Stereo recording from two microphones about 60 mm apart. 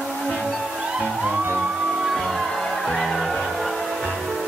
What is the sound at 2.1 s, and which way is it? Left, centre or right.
Music, centre.